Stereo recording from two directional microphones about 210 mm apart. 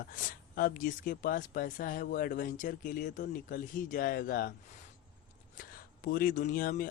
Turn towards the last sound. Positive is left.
turn(degrees=40)  # may be behind; listen again after turning